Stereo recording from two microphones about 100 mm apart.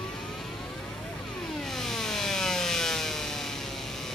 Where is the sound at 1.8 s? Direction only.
5° left (ahead or behind).